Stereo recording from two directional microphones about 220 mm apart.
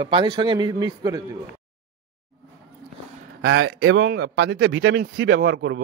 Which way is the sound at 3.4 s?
60° right (ahead or behind).